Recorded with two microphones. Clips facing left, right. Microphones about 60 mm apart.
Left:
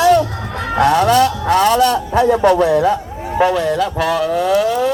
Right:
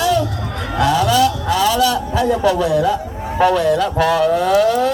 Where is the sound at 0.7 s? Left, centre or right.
Left.